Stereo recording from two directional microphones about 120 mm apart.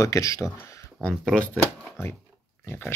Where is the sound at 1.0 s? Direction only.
10° left (ahead or behind).